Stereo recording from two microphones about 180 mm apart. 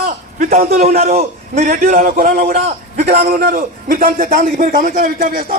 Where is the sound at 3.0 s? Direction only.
40° right (ahead or behind).